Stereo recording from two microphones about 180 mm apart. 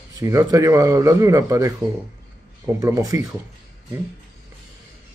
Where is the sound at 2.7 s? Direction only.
20° right (ahead or behind).